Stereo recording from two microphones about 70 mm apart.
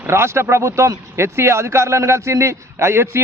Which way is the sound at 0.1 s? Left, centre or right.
Right.